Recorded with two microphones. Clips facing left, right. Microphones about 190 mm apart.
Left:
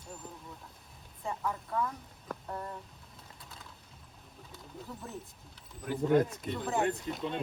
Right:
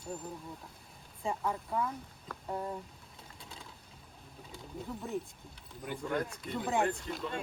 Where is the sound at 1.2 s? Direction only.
15° right (ahead or behind).